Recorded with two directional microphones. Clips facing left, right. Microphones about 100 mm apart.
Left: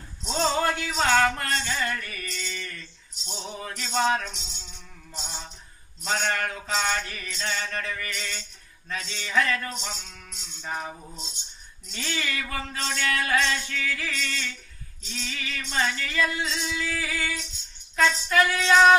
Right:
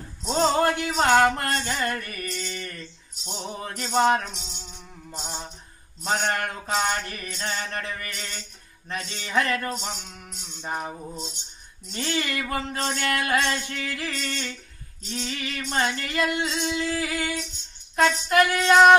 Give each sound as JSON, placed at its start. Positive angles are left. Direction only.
{"t": 0.2, "sound": "a sound", "side_deg": -45}
{"t": 0.7, "sound": "music", "side_deg": -50}
{"t": 1.3, "sound": "a sound", "side_deg": -45}
{"t": 2.5, "sound": "music", "side_deg": -35}
{"t": 6.0, "sound": "mantra", "side_deg": -40}
{"t": 7.6, "sound": "music", "side_deg": -25}
{"t": 7.9, "sound": "music", "side_deg": -40}
{"t": 9.0, "sound": "mantra", "side_deg": -40}
{"t": 10.7, "sound": "music", "side_deg": -30}
{"t": 11.9, "sound": "a sound", "side_deg": -40}
{"t": 16.2, "sound": "music", "side_deg": -65}
{"t": 16.7, "sound": "mantra", "side_deg": -35}
{"t": 17.9, "sound": "a sound", "side_deg": -50}
{"t": 18.6, "sound": "mantra", "side_deg": -40}